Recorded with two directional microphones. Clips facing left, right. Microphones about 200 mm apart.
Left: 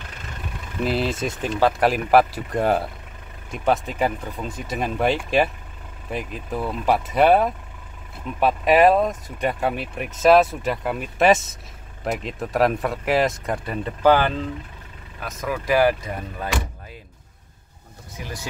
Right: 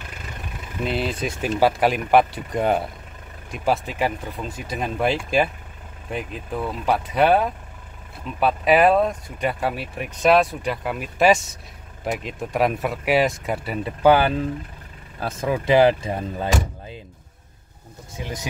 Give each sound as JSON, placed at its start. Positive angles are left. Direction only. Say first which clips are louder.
{"t": 0.8, "sound": "speech", "louder": "left 2 dB", "side_deg": 0}
{"t": 15.1, "sound": "speech", "louder": "right 4 dB", "side_deg": -30}
{"t": 18.1, "sound": "speech", "louder": "right 3 dB", "side_deg": -20}